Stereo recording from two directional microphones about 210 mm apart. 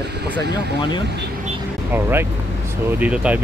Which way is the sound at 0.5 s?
20° left (ahead or behind).